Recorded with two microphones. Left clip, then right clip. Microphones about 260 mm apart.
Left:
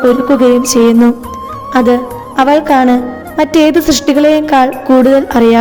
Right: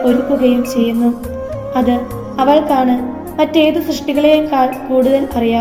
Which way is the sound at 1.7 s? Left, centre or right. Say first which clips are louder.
Left 7 dB; left.